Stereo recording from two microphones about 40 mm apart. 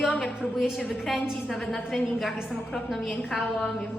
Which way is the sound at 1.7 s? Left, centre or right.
Centre.